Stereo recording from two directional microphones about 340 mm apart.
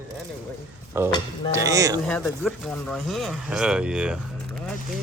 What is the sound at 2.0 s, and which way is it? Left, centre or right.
Speech, centre.